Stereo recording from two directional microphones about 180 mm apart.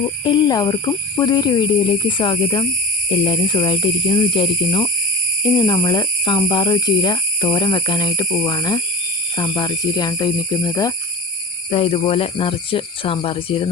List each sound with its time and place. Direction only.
0.3 s speech: 25° left (ahead or behind)
11.7 s speech: 30° left (ahead or behind)